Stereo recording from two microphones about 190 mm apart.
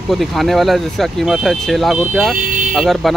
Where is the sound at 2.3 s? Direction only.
45° right (ahead or behind).